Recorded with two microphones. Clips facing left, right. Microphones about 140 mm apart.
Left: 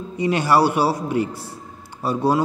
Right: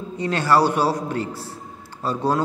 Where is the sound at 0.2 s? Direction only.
15° left (ahead or behind).